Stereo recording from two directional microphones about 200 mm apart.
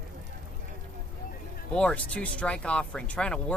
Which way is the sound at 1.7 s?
5° left (ahead or behind).